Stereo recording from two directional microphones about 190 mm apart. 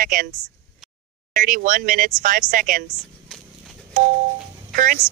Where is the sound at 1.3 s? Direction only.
45° right (ahead or behind).